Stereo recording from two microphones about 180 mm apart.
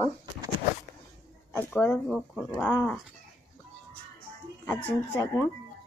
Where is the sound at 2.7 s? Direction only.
20° left (ahead or behind).